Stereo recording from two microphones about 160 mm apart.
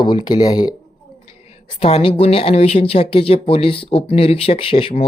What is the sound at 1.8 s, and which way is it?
Speech, 40° left (ahead or behind).